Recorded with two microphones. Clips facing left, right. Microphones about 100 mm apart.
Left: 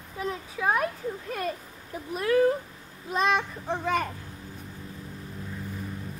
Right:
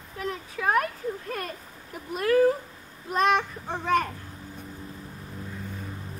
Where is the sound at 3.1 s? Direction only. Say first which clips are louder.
Right 2 dB; centre (ahead or behind).